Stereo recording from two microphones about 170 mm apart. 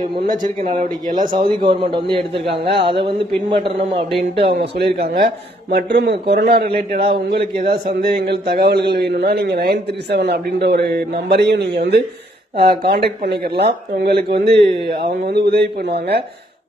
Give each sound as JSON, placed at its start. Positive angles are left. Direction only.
{"t": 0.2, "sound": "speech", "side_deg": -50}
{"t": 1.3, "sound": "a man's voice", "side_deg": -30}
{"t": 2.7, "sound": "a man's voice", "side_deg": -75}
{"t": 4.7, "sound": "a man's voice", "side_deg": -75}
{"t": 5.1, "sound": "a man's voice", "side_deg": -60}
{"t": 12.5, "sound": "a man's voice", "side_deg": -70}